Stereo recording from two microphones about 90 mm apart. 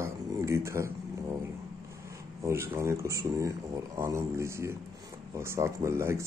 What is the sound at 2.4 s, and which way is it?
Speech, 30° right (ahead or behind).